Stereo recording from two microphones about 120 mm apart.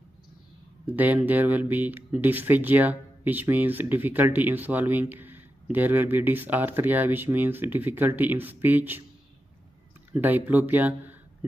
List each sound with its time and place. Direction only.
0.8 s speech: 15° right (ahead or behind)
10.1 s speech: 15° right (ahead or behind)